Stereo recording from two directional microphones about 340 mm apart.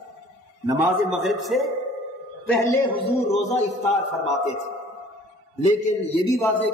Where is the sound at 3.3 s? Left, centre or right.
Centre.